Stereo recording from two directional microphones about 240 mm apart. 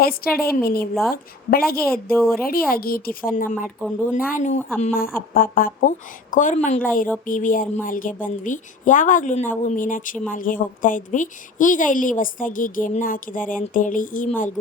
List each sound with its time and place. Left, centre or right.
0.0 s a woman's voice: left